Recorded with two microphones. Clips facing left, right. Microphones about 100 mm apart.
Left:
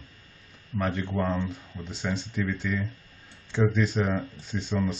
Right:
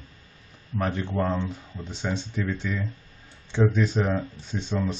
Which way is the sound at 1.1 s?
10° right (ahead or behind).